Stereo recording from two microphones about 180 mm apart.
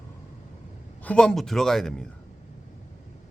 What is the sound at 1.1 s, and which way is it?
Speech, 5° left (ahead or behind).